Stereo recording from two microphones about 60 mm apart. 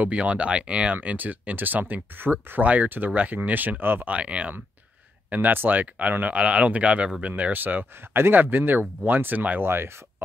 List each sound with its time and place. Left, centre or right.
0.0 s speech: right
4.1 s speech: right
5.3 s speech: right